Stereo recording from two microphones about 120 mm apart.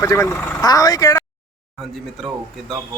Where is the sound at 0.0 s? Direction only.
20° left (ahead or behind).